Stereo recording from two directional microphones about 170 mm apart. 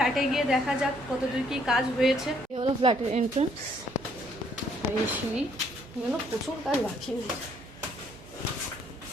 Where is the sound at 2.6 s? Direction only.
30° right (ahead or behind).